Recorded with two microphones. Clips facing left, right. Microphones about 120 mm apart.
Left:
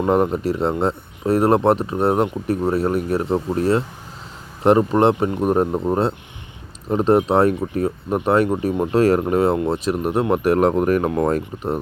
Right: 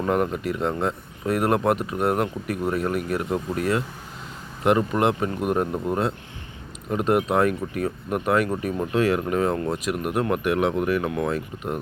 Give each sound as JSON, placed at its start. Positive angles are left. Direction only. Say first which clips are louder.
{"t": 0.0, "sound": "speech", "louder": "left 5 dB", "side_deg": 30}
{"t": 9.0, "sound": "speech", "louder": "left 5 dB", "side_deg": 40}